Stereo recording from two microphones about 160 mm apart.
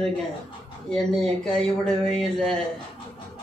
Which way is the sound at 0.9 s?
5° left (ahead or behind).